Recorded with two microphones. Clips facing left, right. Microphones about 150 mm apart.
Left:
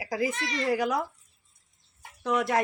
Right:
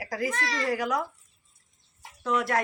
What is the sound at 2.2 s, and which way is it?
Speech, 20° left (ahead or behind).